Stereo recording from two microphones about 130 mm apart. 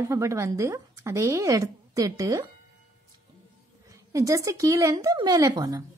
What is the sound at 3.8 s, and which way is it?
A woman's voice, 25° right (ahead or behind).